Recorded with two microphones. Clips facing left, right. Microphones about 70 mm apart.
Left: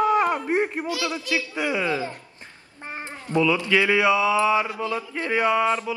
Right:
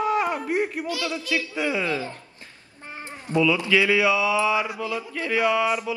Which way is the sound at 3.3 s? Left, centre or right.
Left.